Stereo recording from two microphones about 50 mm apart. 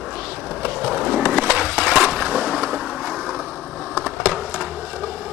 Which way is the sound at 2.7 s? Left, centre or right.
Centre.